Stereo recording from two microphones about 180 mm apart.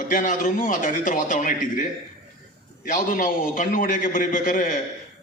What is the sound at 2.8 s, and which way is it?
A man's voice, 50° left (ahead or behind).